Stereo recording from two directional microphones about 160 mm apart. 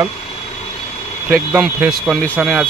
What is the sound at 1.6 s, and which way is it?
Speech, centre (ahead or behind).